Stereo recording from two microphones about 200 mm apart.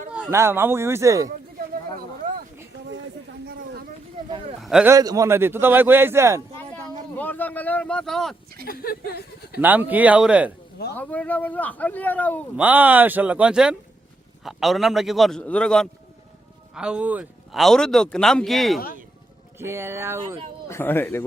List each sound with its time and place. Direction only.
0.1 s a man's voice: 10° right (ahead or behind)
3.4 s a sound: 50° right (ahead or behind)
4.3 s a sound: 25° right (ahead or behind)
4.6 s a man's voice: 5° right (ahead or behind)
4.9 s a man's voice: 15° right (ahead or behind)
7.2 s speech: 10° left (ahead or behind)
8.6 s speech: 45° left (ahead or behind)
9.6 s a man's voice: 10° right (ahead or behind)
10.9 s speech: 10° left (ahead or behind)
12.5 s a man's voice: 10° right (ahead or behind)
19.5 s a man's voice: 10° right (ahead or behind)
20.7 s speech: 10° left (ahead or behind)